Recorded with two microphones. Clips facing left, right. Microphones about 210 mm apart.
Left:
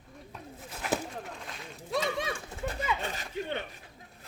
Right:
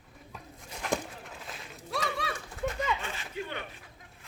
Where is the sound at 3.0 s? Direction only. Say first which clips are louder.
Left 2 dB; 40° left (ahead or behind).